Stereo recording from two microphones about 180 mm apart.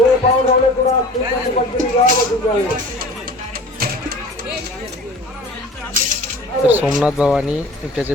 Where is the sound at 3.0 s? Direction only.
55° right (ahead or behind).